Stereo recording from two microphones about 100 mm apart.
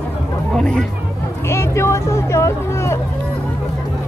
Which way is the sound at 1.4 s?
25° left (ahead or behind).